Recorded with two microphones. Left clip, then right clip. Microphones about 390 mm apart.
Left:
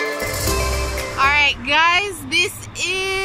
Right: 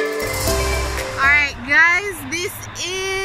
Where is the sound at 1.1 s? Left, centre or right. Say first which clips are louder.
Even; centre.